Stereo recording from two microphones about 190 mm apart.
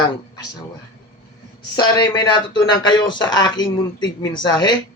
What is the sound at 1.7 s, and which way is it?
Speech, 25° left (ahead or behind).